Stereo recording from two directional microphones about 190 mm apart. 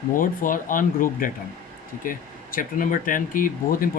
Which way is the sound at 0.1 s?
45° left (ahead or behind).